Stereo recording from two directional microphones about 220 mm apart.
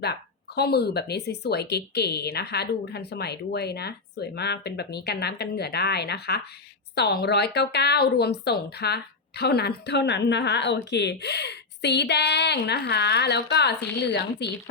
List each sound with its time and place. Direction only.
0.0 s speech: 45° left (ahead or behind)